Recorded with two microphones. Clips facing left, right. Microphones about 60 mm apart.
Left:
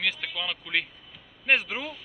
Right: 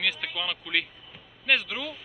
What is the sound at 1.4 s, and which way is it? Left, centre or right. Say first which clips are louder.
Speech: left 1 dB; left.